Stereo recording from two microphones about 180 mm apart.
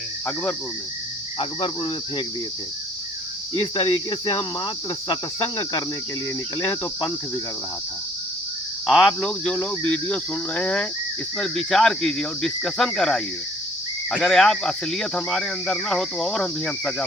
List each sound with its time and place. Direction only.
1.4 s cricket: 30° left (ahead or behind)
3.5 s cricket: 25° left (ahead or behind)
6.6 s speech: 15° left (ahead or behind)
8.9 s speech: 5° left (ahead or behind)